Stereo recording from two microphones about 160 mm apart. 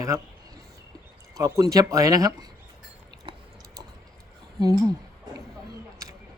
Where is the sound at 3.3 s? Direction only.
30° right (ahead or behind).